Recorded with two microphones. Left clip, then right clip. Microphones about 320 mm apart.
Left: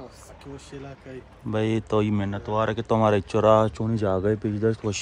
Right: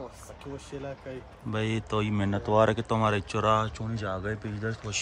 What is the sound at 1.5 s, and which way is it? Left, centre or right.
Speech, centre.